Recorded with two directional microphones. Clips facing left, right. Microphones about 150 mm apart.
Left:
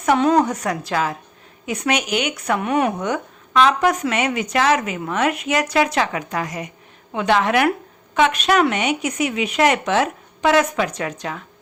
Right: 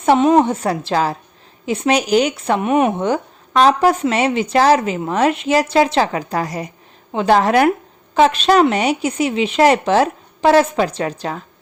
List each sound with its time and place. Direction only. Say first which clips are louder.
0.0 s a woman's voice: right 4 dB; 25° right (ahead or behind)